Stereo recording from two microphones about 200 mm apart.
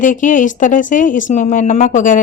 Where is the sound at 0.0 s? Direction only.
40° left (ahead or behind).